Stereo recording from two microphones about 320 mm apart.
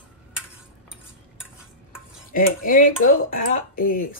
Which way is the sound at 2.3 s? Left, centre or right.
Left.